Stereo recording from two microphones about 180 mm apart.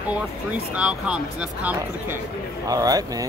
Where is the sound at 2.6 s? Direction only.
20° right (ahead or behind).